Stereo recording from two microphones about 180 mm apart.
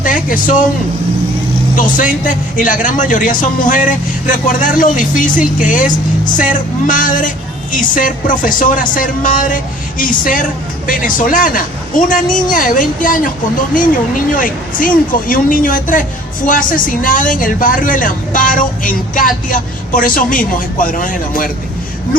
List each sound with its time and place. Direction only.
0.0 s a sound: 50° left (ahead or behind)
1.7 s speech: 45° left (ahead or behind)
14.3 s speech: 50° left (ahead or behind)